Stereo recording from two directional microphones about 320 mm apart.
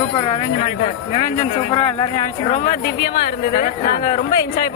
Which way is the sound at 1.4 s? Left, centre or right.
Centre.